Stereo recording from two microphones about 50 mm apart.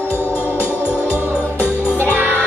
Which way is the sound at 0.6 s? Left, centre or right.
Left.